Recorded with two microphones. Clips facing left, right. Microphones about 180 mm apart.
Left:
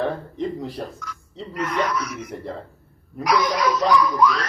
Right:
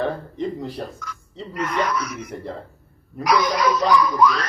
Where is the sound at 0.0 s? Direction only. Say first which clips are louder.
Even; centre (ahead or behind).